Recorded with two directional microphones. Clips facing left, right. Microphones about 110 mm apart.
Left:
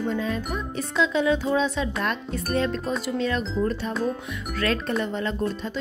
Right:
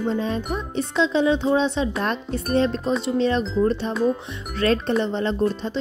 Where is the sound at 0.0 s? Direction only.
25° right (ahead or behind).